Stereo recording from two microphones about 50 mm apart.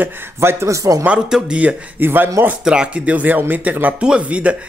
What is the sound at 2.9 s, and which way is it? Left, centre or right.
A man's voice, right.